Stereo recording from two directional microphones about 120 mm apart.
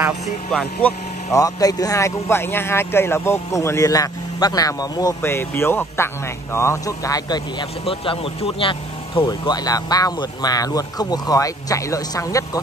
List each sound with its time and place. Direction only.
0.5 s speech: 5° left (ahead or behind)
1.3 s a man's voice: 30° left (ahead or behind)
5.2 s a man's voice: 20° left (ahead or behind)
7.8 s speech: 50° left (ahead or behind); by 12.4 s 25° left (ahead or behind)